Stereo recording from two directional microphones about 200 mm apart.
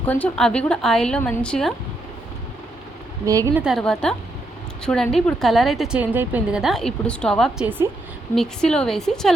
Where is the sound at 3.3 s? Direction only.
15° right (ahead or behind).